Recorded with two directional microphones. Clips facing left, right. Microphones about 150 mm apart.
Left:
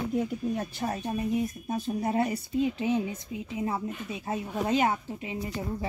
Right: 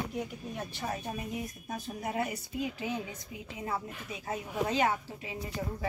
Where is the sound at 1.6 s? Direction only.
30° left (ahead or behind).